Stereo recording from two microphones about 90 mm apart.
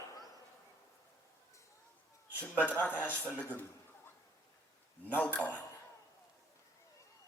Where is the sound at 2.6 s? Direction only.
15° left (ahead or behind).